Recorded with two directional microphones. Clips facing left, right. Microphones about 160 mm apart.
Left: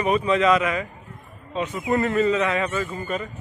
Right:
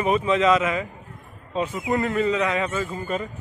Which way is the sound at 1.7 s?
5° right (ahead or behind).